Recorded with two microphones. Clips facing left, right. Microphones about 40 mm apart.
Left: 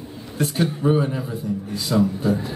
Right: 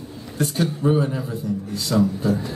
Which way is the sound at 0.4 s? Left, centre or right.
Centre.